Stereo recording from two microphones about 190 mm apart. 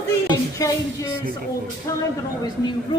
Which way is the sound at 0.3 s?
15° left (ahead or behind).